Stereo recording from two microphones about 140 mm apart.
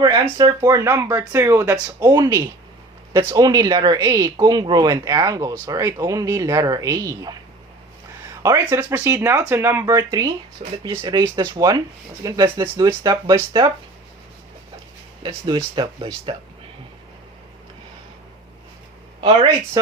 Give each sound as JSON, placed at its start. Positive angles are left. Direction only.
{"t": 0.0, "sound": "speech", "side_deg": -25}
{"t": 8.4, "sound": "speech", "side_deg": -15}
{"t": 15.7, "sound": "speech", "side_deg": -30}
{"t": 19.2, "sound": "speech", "side_deg": -40}
{"t": 19.8, "sound": "speech", "side_deg": -25}